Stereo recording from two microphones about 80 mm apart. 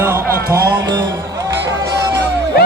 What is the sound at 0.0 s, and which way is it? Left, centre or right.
Music, right.